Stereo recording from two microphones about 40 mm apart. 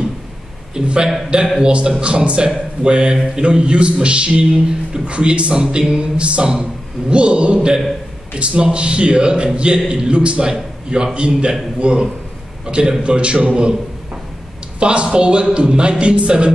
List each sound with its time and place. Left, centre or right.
0.8 s a man's voice: right
14.8 s a man's voice: right